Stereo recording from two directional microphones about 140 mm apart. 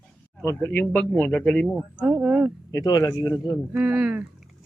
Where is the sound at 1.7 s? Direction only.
5° right (ahead or behind).